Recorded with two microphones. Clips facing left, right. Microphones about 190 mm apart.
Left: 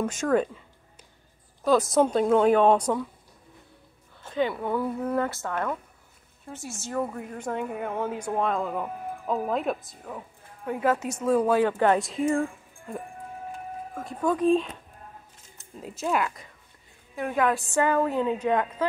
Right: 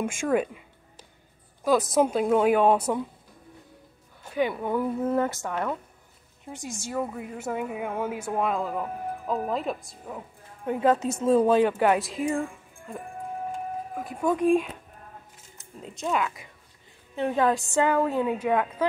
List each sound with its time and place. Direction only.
0.0 s a woman's voice: 10° right (ahead or behind)
1.8 s a woman's voice: 5° right (ahead or behind)
4.2 s a woman's voice: 15° right (ahead or behind)
10.7 s speech: 20° right (ahead or behind)
12.0 s speech: centre (ahead or behind)
14.1 s a woman's voice: 10° right (ahead or behind)
15.8 s speech: 5° left (ahead or behind)
17.1 s a woman's voice: 25° right (ahead or behind)
17.7 s a woman's voice: 15° right (ahead or behind)